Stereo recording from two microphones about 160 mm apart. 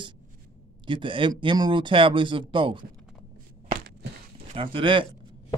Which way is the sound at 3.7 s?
90° right.